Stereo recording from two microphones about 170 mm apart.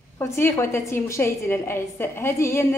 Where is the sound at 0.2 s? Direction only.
15° left (ahead or behind).